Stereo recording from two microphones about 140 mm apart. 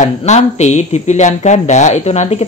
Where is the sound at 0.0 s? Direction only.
55° left (ahead or behind).